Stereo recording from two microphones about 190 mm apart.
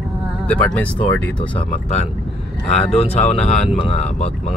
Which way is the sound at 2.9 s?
35° left (ahead or behind).